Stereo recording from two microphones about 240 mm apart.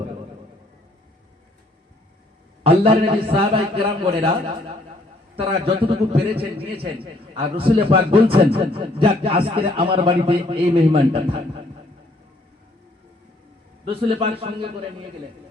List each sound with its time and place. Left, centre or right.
2.6 s a man's voice: right
13.8 s a man's voice: right